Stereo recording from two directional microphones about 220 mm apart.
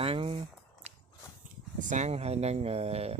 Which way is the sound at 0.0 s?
25° right (ahead or behind).